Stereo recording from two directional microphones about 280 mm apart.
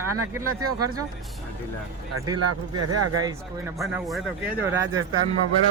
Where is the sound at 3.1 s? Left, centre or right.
Centre.